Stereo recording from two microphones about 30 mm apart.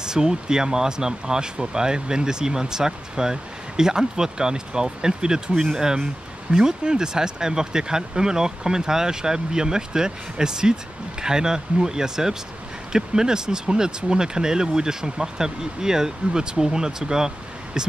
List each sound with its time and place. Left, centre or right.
0.0 s speech: right